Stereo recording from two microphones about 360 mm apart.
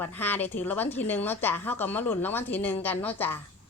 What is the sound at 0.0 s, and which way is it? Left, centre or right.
Speech, centre.